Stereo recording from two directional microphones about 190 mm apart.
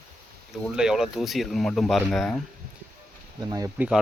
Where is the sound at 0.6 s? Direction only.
5° right (ahead or behind).